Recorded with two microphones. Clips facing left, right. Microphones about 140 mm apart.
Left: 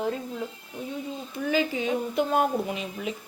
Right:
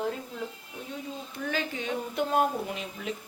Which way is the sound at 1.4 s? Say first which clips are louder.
Left 7 dB; 5° left (ahead or behind).